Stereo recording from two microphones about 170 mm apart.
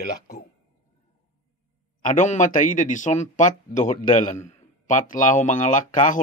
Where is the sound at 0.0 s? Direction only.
65° left (ahead or behind).